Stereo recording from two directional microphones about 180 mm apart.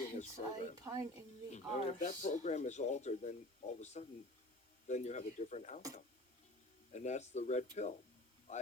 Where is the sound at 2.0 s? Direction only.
45° left (ahead or behind).